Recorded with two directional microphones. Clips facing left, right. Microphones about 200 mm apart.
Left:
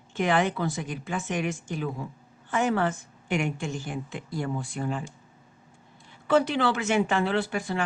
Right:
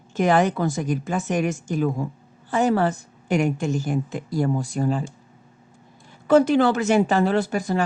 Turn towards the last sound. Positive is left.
turn(degrees=-40)  # may be behind; listen again after turning